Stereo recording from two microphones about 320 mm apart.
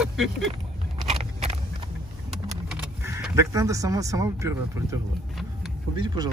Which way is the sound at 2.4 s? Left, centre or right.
Centre.